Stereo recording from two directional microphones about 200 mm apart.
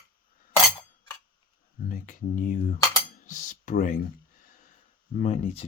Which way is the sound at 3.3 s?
40° left (ahead or behind).